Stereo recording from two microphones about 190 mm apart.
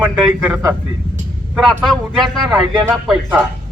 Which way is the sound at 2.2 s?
Centre (ahead or behind).